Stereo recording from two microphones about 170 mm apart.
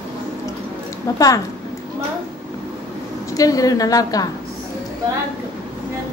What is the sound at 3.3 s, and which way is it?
Speech, 20° left (ahead or behind).